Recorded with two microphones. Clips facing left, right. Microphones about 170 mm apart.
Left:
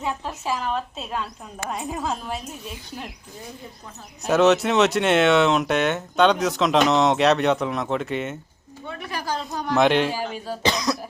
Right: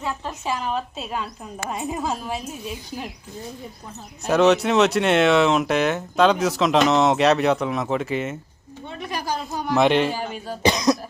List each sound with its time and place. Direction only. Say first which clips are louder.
0.3 s speech: right 2 dB; centre (ahead or behind)
4.3 s speech: right 1 dB; centre (ahead or behind)
9.0 s a sound: right 2 dB; 15° right (ahead or behind)
9.5 s speech: right 1 dB; 5° right (ahead or behind)
10.6 s speech: right 5 dB; 20° right (ahead or behind)